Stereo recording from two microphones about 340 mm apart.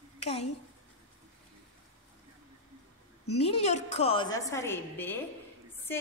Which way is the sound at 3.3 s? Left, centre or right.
Centre.